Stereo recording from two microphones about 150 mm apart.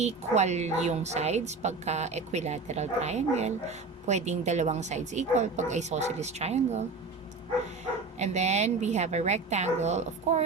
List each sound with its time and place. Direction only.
0.0 s speech: 50° right (ahead or behind)
8.2 s speech: 50° right (ahead or behind)